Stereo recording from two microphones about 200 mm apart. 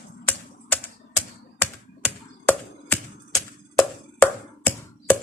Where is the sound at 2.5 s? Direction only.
10° left (ahead or behind).